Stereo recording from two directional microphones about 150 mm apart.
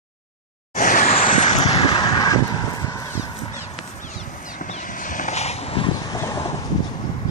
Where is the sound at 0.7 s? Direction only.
60° left (ahead or behind).